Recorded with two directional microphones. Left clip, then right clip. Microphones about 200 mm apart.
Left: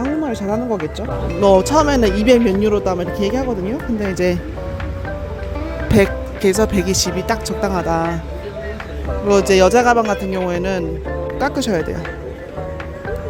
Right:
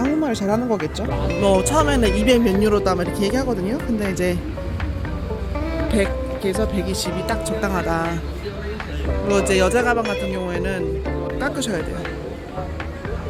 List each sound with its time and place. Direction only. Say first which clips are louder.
0.3 s speech: left 1 dB; 10° left (ahead or behind)
1.4 s speech: left 5 dB; 20° left (ahead or behind)
5.9 s speech: left 8 dB; 30° left (ahead or behind)
7.6 s speech: left 4 dB; 20° left (ahead or behind)
9.3 s speech: left 6 dB; 25° left (ahead or behind)